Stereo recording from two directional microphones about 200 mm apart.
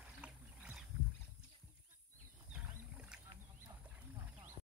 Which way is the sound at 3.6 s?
5° right (ahead or behind).